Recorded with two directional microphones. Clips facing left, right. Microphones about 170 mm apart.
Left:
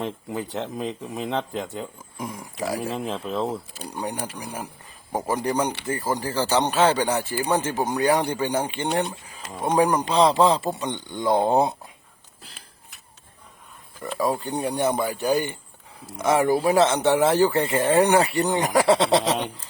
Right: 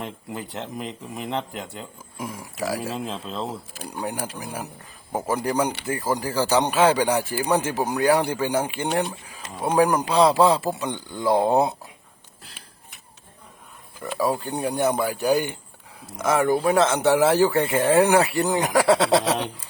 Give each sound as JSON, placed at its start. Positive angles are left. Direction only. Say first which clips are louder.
{"t": 0.0, "sound": "speech", "louder": "left 4 dB", "side_deg": 20}
{"t": 2.1, "sound": "speech", "louder": "right 1 dB", "side_deg": 0}
{"t": 3.0, "sound": "speech", "louder": "left 3 dB", "side_deg": 20}
{"t": 4.0, "sound": "speech", "louder": "right 1 dB", "side_deg": -5}
{"t": 14.0, "sound": "speech", "louder": "even", "side_deg": 0}
{"t": 16.2, "sound": "speech", "louder": "even", "side_deg": 0}